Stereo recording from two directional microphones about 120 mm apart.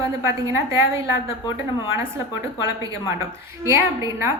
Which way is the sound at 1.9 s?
25° right (ahead or behind).